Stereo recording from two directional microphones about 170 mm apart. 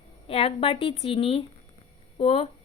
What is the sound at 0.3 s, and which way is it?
A woman's voice, 35° left (ahead or behind).